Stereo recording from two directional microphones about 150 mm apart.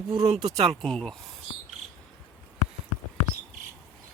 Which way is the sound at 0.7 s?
5° left (ahead or behind).